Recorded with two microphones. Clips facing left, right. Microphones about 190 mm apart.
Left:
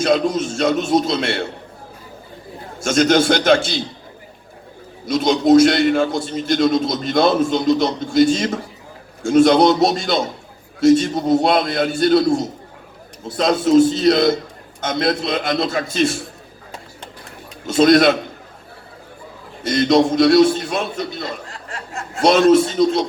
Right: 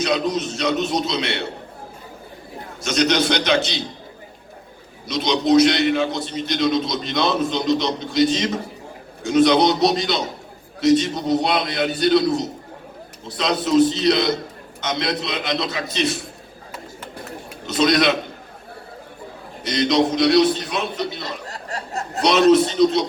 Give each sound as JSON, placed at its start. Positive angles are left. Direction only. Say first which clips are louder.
{"t": 0.0, "sound": "a man's voice", "louder": "left 4 dB", "side_deg": 50}
{"t": 2.8, "sound": "a man's voice", "louder": "left 4 dB", "side_deg": 50}
{"t": 5.0, "sound": "a man's voice", "louder": "left 5 dB", "side_deg": 50}
{"t": 17.7, "sound": "a man's voice", "louder": "left 5 dB", "side_deg": 50}
{"t": 19.6, "sound": "a man's voice", "louder": "left 4 dB", "side_deg": 50}
{"t": 21.4, "sound": "a sound", "louder": "right 2 dB", "side_deg": -40}
{"t": 22.2, "sound": "a man's voice", "louder": "left 2 dB", "side_deg": 50}